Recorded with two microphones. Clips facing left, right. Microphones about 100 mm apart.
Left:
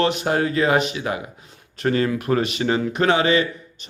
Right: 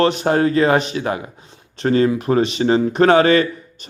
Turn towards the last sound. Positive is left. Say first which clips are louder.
# right 6 dB
turn(degrees=-45)  # may be behind; listen again after turning